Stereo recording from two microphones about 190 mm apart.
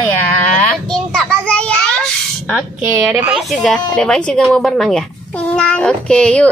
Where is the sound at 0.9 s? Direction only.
5° left (ahead or behind).